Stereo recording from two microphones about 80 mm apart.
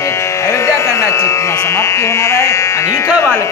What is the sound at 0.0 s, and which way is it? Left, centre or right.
Speech, left.